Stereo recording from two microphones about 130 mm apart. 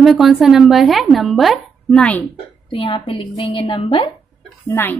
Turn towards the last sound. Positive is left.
turn(degrees=15)  # may be behind; listen again after turning